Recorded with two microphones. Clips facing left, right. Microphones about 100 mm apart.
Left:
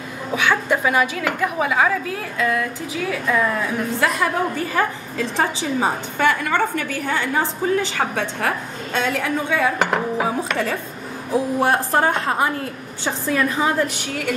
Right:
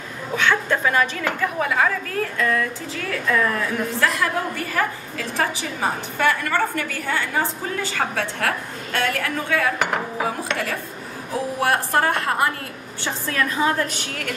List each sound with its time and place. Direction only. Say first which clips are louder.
0.4 s a woman's voice: left 1 dB; 10° left (ahead or behind)